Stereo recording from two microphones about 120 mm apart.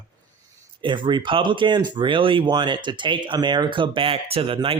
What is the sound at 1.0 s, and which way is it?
Speech, 40° right (ahead or behind).